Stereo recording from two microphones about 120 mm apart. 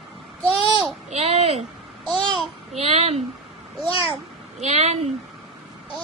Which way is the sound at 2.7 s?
60° right (ahead or behind).